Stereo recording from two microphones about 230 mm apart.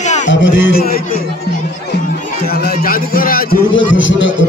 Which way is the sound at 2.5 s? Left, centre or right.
Left.